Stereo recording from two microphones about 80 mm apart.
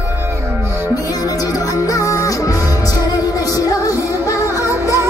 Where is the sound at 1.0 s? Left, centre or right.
Left.